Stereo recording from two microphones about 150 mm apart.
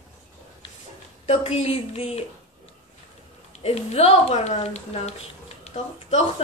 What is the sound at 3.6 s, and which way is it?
A woman's voice, 45° left (ahead or behind).